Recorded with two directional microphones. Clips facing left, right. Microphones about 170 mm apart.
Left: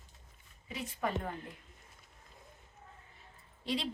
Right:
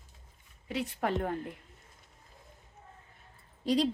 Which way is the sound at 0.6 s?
70° right (ahead or behind).